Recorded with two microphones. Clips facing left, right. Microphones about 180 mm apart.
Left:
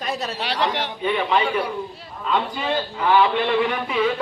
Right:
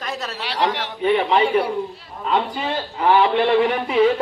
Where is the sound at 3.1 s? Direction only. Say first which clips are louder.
Right 2 dB; 35° right (ahead or behind).